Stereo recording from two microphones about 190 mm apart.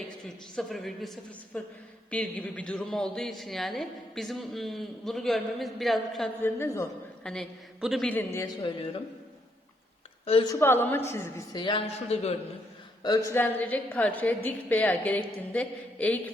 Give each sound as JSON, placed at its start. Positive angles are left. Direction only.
{"t": 0.5, "sound": "speech", "side_deg": 0}
{"t": 6.4, "sound": "a woman's voice", "side_deg": 15}
{"t": 7.3, "sound": "speech", "side_deg": 0}
{"t": 10.5, "sound": "a woman's voice", "side_deg": 10}
{"t": 13.0, "sound": "a woman's voice", "side_deg": 20}